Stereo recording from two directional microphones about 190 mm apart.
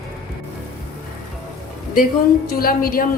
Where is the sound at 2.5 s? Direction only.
50° left (ahead or behind).